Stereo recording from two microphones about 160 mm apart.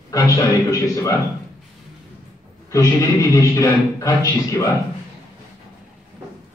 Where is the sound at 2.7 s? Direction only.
20° left (ahead or behind).